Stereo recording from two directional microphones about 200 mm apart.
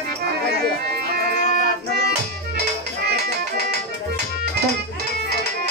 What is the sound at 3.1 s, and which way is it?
Music, 55° right (ahead or behind).